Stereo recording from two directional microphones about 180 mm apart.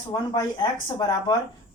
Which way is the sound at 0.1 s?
25° left (ahead or behind).